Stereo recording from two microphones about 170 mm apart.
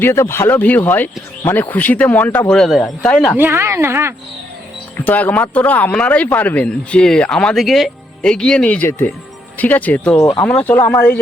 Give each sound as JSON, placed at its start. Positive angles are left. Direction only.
{"t": 0.0, "sound": "speech", "side_deg": 15}
{"t": 3.3, "sound": "speech", "side_deg": -15}
{"t": 4.9, "sound": "speech", "side_deg": 10}
{"t": 10.2, "sound": "speech", "side_deg": 20}
{"t": 10.4, "sound": "speech", "side_deg": 10}